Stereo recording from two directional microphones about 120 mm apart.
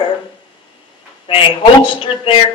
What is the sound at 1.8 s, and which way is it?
Speech, 50° left (ahead or behind).